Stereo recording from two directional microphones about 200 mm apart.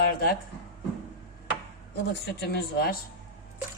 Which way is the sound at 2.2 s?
55° left (ahead or behind).